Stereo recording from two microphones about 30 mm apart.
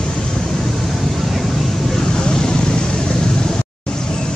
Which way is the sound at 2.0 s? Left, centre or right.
Left.